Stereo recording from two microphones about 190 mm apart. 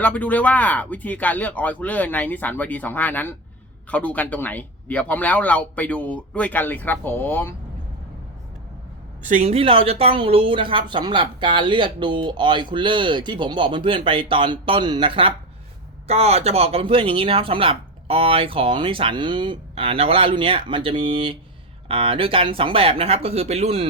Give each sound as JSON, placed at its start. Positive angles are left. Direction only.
{"t": 0.0, "sound": "speech", "side_deg": 10}
{"t": 9.2, "sound": "a woman's voice", "side_deg": -35}